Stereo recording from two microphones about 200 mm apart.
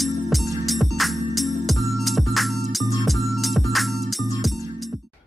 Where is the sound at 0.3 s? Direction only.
Centre (ahead or behind).